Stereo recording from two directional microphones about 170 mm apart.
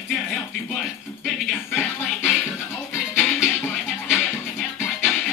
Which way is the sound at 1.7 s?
10° left (ahead or behind).